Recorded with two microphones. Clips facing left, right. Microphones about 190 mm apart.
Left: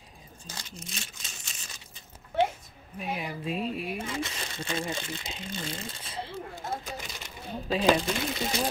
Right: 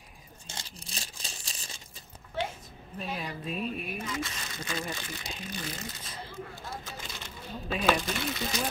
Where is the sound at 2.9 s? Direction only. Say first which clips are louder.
Left 2 dB; 15° left (ahead or behind).